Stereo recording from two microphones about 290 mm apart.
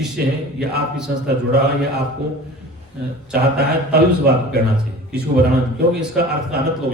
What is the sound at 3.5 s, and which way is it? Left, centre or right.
A man's voice, right.